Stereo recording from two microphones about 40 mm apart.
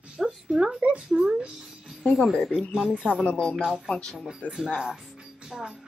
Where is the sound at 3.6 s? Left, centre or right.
Centre.